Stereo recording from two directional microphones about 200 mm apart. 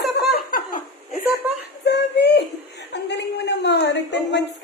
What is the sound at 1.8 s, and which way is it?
Chuckle, 60° left (ahead or behind).